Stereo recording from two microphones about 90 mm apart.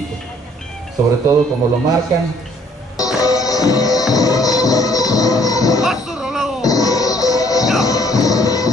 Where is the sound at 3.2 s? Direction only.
40° left (ahead or behind).